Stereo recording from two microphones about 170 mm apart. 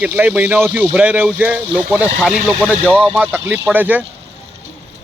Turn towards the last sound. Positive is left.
turn(degrees=-10)  # may be behind; listen again after turning